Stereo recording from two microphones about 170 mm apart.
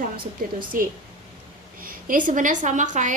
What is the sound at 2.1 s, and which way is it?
A woman's voice, 50° right (ahead or behind).